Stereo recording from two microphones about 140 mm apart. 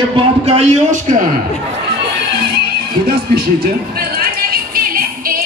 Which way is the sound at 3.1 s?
90° right.